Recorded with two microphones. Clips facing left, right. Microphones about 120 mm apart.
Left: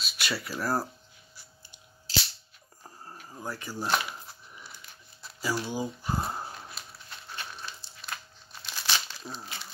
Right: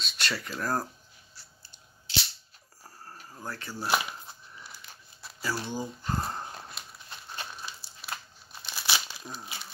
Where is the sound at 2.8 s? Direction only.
15° left (ahead or behind).